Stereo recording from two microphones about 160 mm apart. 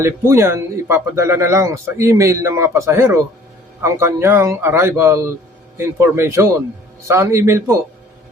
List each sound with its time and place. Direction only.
0.0 s speech: 15° right (ahead or behind)